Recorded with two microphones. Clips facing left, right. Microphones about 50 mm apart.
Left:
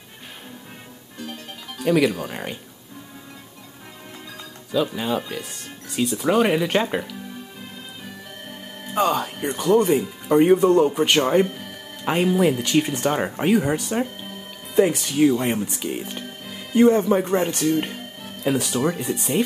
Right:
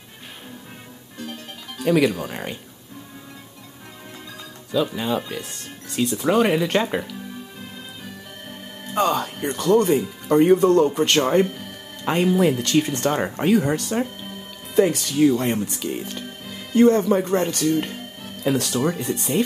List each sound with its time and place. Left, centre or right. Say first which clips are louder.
1.8 s speech: even; centre
4.3 s speech: even; centre
8.9 s speech: even; centre
14.8 s speech: even; centre
18.4 s speech: even; centre